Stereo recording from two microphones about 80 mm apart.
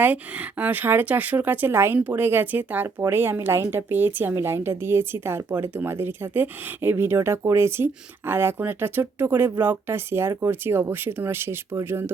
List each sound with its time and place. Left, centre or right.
0.0 s speech: centre